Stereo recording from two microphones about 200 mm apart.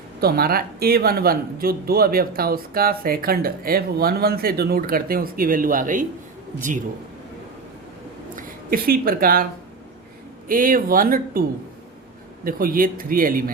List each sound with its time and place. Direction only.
0.2 s speech: 50° right (ahead or behind)
8.4 s a woman's voice: 45° right (ahead or behind)
10.5 s speech: 45° right (ahead or behind)
12.5 s speech: 45° right (ahead or behind)